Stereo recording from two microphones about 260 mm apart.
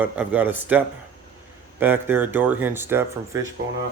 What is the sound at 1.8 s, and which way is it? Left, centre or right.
Speech, centre.